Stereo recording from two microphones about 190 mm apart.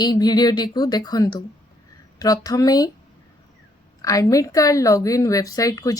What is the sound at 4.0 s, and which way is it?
A woman's voice, 20° left (ahead or behind).